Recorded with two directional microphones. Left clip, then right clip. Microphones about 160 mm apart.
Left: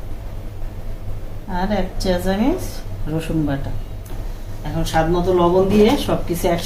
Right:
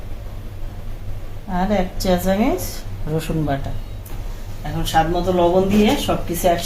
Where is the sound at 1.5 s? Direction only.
50° right (ahead or behind).